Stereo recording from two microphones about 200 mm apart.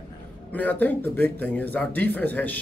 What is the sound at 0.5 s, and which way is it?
Speech, 10° left (ahead or behind).